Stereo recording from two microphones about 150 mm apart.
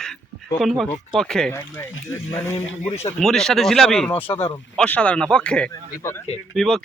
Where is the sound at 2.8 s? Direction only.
50° left (ahead or behind).